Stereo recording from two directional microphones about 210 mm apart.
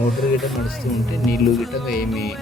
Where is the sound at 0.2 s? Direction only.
Centre (ahead or behind).